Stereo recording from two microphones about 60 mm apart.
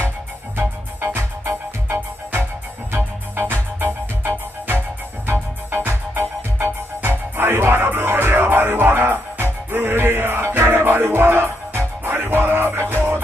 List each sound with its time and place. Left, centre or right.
0.6 s music: right
5.7 s music: right